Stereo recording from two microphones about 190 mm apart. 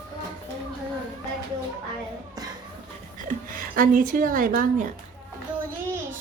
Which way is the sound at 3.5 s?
50° right (ahead or behind).